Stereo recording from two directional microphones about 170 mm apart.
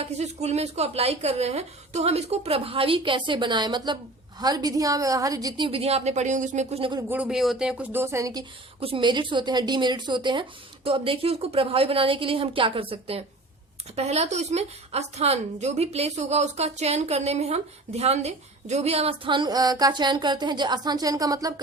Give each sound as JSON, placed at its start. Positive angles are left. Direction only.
{"t": 0.0, "sound": "a woman's voice", "side_deg": -40}
{"t": 7.1, "sound": "speech", "side_deg": -5}
{"t": 8.8, "sound": "a woman's voice", "side_deg": -30}